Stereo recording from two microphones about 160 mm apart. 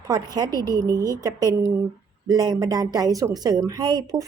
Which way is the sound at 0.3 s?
25° right (ahead or behind).